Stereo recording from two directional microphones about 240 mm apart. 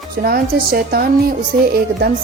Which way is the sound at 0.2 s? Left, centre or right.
Right.